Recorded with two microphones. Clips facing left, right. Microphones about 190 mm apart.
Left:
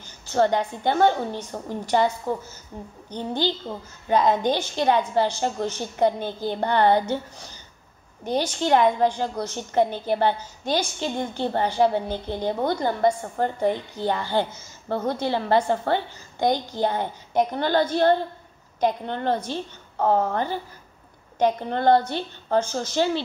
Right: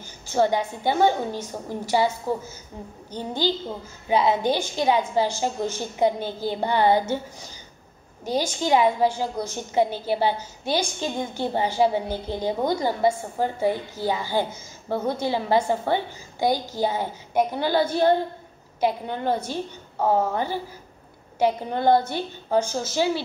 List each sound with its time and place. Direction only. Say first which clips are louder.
0.3 s a woman's voice: left 1 dB; 10° right (ahead or behind)
3.2 s a woman's voice: even; 10° right (ahead or behind)